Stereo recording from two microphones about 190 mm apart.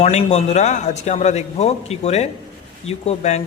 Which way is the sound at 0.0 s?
35° left (ahead or behind).